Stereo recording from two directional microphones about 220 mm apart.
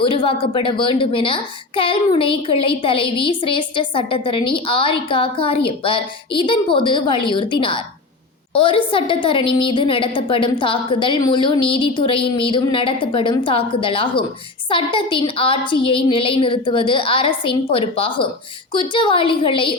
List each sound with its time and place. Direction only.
0.0 s a woman's voice: 25° left (ahead or behind)